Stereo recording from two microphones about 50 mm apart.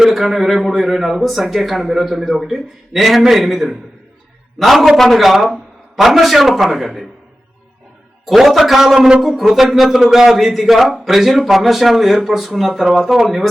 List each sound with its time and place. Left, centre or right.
0.0 s a man's voice: centre
8.4 s a man's voice: centre
9.0 s a man's voice: centre
9.2 s a man's voice: centre